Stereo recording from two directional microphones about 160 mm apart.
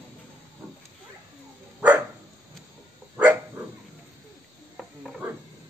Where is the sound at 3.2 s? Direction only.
10° right (ahead or behind).